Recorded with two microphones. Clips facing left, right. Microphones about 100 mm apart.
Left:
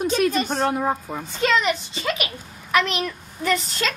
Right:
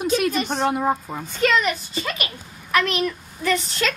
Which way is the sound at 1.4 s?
25° left (ahead or behind).